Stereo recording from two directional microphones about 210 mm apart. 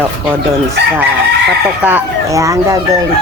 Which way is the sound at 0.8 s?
55° right (ahead or behind).